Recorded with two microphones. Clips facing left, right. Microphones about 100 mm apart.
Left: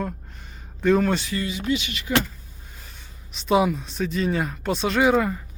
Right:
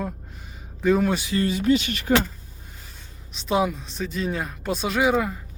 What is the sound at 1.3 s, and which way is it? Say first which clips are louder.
Speech: right 5 dB; 45° right (ahead or behind).